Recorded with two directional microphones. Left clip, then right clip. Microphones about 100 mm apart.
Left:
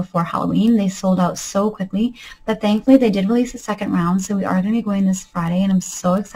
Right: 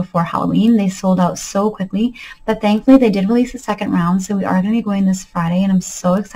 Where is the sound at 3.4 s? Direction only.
20° right (ahead or behind).